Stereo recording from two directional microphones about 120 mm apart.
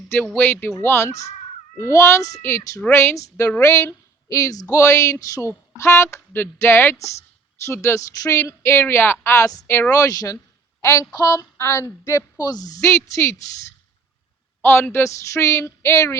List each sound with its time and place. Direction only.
0.3 s a woman's voice: 15° left (ahead or behind)
14.6 s a woman's voice: 20° left (ahead or behind)